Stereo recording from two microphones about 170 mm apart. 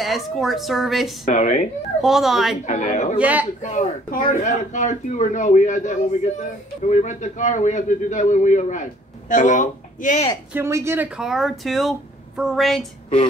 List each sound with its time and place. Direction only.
0.0 s speech: centre (ahead or behind)
1.2 s a man's voice: 45° left (ahead or behind)
2.0 s speech: centre (ahead or behind)
2.6 s a man's voice: 45° left (ahead or behind)
3.2 s speech: 10° right (ahead or behind)
3.6 s a man's voice: 45° left (ahead or behind)
10.5 s speech: 15° right (ahead or behind)
11.1 s speech: centre (ahead or behind)